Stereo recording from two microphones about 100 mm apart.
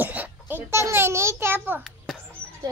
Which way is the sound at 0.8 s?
25° right (ahead or behind).